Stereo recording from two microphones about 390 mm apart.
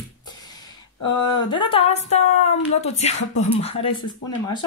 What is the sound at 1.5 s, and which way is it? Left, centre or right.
Speech, centre.